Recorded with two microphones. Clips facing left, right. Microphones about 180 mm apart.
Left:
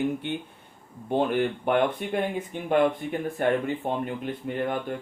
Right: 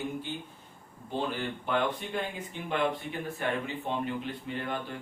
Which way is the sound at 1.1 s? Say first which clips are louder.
Left 9 dB; 60° left (ahead or behind).